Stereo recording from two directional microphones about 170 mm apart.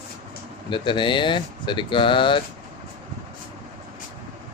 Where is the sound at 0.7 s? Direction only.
30° left (ahead or behind).